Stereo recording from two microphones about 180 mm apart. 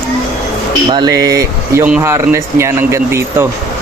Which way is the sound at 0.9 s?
20° right (ahead or behind).